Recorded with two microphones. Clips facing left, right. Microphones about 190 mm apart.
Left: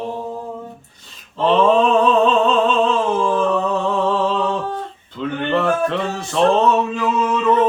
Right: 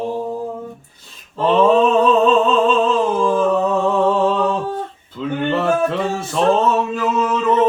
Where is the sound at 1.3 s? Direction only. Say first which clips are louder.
Right 1 dB; 5° right (ahead or behind).